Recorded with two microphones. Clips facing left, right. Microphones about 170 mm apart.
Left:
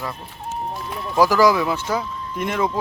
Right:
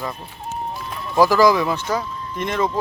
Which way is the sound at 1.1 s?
10° left (ahead or behind).